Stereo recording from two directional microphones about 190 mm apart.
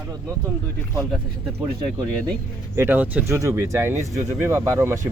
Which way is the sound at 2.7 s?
10° right (ahead or behind).